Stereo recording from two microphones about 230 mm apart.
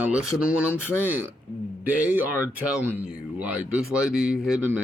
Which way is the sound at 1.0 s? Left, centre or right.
Centre.